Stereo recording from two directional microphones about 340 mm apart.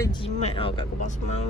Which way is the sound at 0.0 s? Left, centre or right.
Centre.